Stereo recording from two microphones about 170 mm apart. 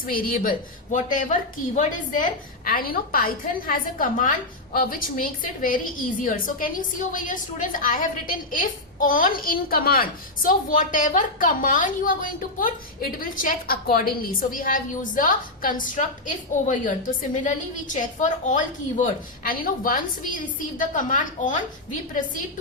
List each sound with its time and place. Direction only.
0.0 s a woman's voice: 55° left (ahead or behind)